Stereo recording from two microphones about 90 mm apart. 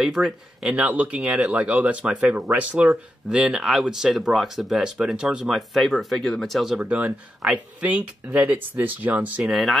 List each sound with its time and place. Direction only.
0.0 s speech: 5° right (ahead or behind)
0.7 s speech: 15° right (ahead or behind); by 6.8 s centre (ahead or behind)
6.8 s speech: 15° right (ahead or behind)
9.5 s speech: centre (ahead or behind)